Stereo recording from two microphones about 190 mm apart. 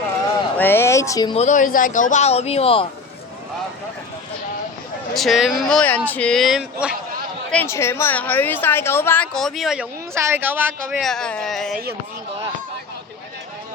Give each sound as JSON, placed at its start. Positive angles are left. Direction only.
{"t": 0.5, "sound": "speech", "side_deg": 10}
{"t": 1.3, "sound": "speech", "side_deg": 35}
{"t": 5.1, "sound": "speech", "side_deg": 0}
{"t": 7.5, "sound": "speech", "side_deg": 10}
{"t": 10.2, "sound": "speech", "side_deg": -10}